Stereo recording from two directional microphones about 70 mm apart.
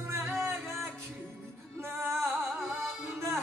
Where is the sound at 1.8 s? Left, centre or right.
Right.